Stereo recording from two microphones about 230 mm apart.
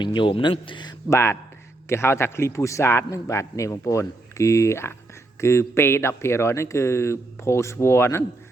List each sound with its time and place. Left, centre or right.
0.0 s a man's voice: left